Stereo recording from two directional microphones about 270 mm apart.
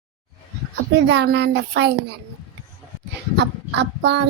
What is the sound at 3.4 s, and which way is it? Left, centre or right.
Speech, right.